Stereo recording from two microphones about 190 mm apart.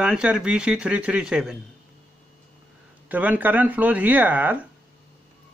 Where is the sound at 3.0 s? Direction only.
10° right (ahead or behind).